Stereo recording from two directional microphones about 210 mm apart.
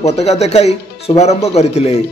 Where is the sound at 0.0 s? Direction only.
30° left (ahead or behind).